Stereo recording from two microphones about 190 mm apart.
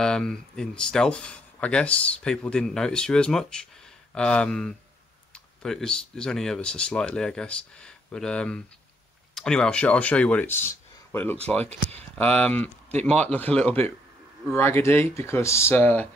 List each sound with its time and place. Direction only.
0.0 s speech: 5° left (ahead or behind)
11.6 s speech: 35° right (ahead or behind)
12.2 s speech: 5° left (ahead or behind)